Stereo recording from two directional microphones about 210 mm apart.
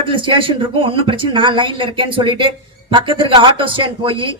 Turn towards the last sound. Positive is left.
turn(degrees=-25)  # may be behind; listen again after turning